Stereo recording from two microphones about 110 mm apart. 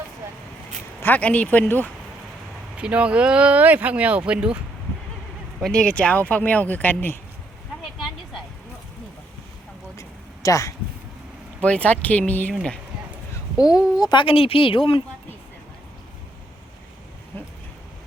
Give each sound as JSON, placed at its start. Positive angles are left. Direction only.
{"t": 1.0, "sound": "speech", "side_deg": 15}
{"t": 2.7, "sound": "speech", "side_deg": -10}
{"t": 5.6, "sound": "speech", "side_deg": 5}
{"t": 10.0, "sound": "a sound", "side_deg": 30}
{"t": 11.6, "sound": "speech", "side_deg": 10}
{"t": 13.3, "sound": "a sound", "side_deg": 35}
{"t": 14.0, "sound": "speech", "side_deg": 45}